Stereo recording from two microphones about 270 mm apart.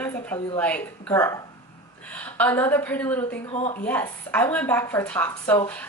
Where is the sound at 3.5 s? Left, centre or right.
Left.